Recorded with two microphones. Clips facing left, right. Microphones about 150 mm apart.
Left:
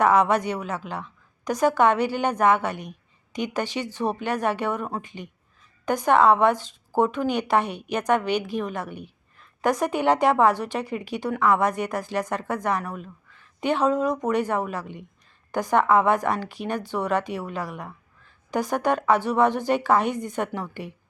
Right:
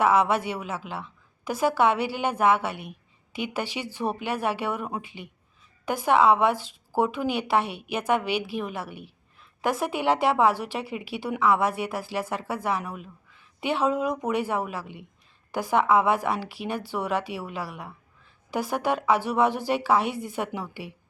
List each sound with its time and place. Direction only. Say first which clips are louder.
0.0 s a woman's voice: left 2 dB; 5° right (ahead or behind)